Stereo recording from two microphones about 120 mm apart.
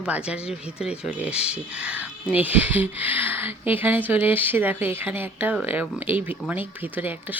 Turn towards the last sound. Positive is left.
turn(degrees=-15)  # may be behind; listen again after turning